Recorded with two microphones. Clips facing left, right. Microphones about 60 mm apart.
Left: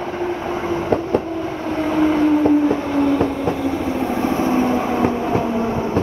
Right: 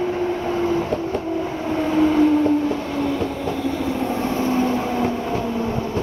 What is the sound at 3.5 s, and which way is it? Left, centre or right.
Vehicle, centre.